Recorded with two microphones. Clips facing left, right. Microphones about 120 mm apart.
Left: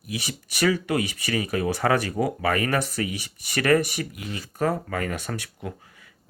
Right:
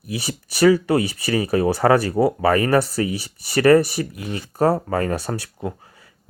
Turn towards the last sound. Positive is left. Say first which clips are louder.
# right 6 dB
turn(degrees=-35)  # may be behind; listen again after turning